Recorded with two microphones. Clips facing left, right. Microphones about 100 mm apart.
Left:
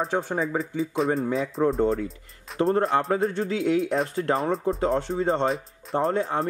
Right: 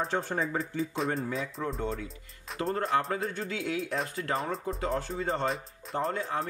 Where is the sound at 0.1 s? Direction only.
5° left (ahead or behind).